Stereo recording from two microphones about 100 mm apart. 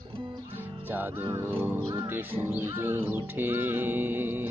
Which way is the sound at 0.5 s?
20° right (ahead or behind).